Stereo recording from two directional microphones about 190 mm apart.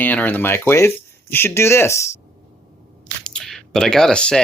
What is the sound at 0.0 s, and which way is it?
Speech, 10° left (ahead or behind).